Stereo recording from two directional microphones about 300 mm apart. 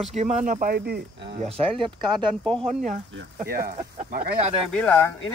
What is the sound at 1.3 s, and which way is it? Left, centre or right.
Speech, centre.